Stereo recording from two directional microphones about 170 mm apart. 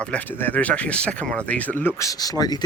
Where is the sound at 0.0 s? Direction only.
10° left (ahead or behind).